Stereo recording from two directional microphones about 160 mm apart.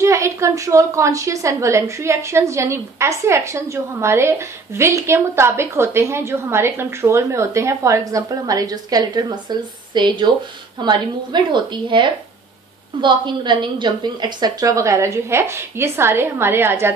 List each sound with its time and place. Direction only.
0.0 s a woman's voice: 20° right (ahead or behind)